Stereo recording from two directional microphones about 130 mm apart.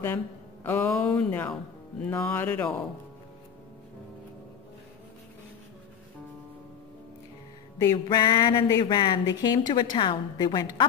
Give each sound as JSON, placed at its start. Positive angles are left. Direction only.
{"t": 0.7, "sound": "speech", "side_deg": 20}
{"t": 7.8, "sound": "speech", "side_deg": 30}